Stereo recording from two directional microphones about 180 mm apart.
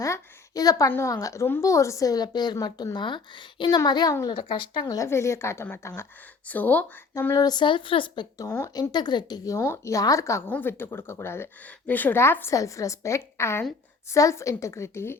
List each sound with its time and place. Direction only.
0.0 s speech: 20° left (ahead or behind)